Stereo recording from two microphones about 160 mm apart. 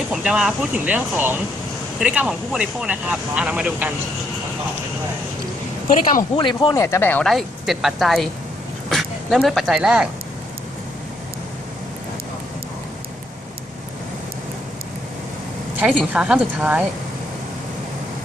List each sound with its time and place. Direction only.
0.1 s speech: 5° right (ahead or behind)
5.9 s speech: 60° left (ahead or behind)
6.3 s speech: 30° left (ahead or behind); by 7.3 s 10° left (ahead or behind)
7.3 s speech: centre (ahead or behind)
15.8 s speech: 10° right (ahead or behind)